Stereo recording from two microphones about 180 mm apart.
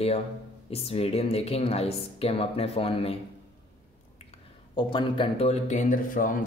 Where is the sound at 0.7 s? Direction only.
35° left (ahead or behind).